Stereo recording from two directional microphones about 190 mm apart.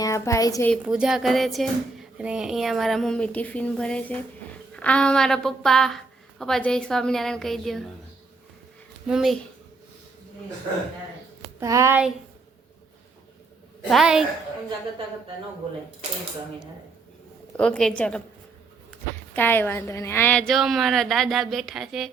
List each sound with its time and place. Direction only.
0.0 s a woman's voice: 15° left (ahead or behind)
0.7 s speech: 5° right (ahead or behind)
9.0 s speech: centre (ahead or behind)
11.6 s speech: 15° right (ahead or behind)
13.9 s speech: 5° right (ahead or behind)
17.6 s speech: 5° left (ahead or behind)
19.3 s speech: 10° left (ahead or behind)